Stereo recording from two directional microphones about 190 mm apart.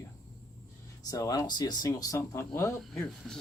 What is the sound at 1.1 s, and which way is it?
Speech, 15° left (ahead or behind).